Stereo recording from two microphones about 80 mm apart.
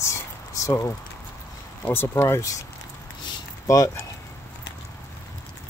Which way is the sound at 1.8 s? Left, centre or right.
Left.